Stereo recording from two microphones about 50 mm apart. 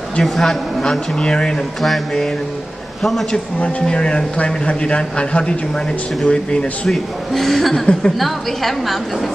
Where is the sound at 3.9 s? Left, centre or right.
Centre.